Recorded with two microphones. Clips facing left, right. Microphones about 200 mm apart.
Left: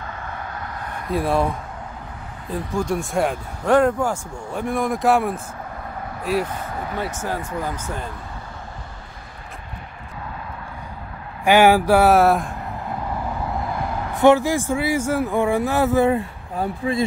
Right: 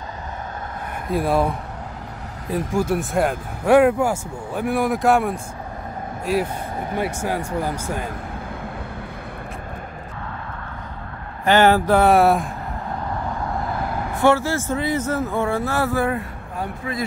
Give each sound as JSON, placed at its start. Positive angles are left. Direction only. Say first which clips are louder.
{"t": 1.1, "sound": "speech", "louder": "right 1 dB", "side_deg": 0}
{"t": 2.7, "sound": "speech", "louder": "right 1 dB", "side_deg": -5}
{"t": 6.8, "sound": "speech", "louder": "right 4 dB", "side_deg": -15}
{"t": 11.4, "sound": "speech", "louder": "left 1 dB", "side_deg": 10}
{"t": 13.4, "sound": "vehicle", "louder": "even", "side_deg": 0}
{"t": 14.2, "sound": "speech", "louder": "left 3 dB", "side_deg": 15}